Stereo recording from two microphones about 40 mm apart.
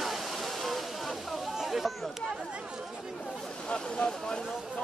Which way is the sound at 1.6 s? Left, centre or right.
Centre.